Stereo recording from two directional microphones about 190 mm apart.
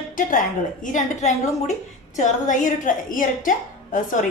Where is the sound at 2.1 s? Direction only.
40° left (ahead or behind).